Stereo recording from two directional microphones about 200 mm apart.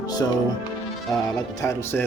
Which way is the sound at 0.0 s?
20° left (ahead or behind).